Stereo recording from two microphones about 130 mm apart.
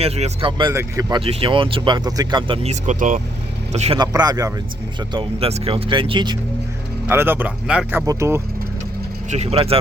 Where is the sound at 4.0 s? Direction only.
30° right (ahead or behind).